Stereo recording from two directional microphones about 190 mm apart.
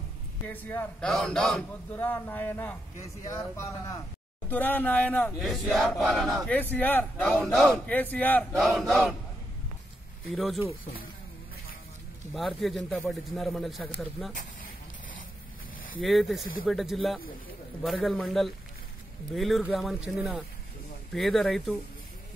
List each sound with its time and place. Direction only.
0.5 s speech: 10° left (ahead or behind)
10.2 s speech: centre (ahead or behind)
12.4 s speech: centre (ahead or behind)
16.0 s speech: centre (ahead or behind)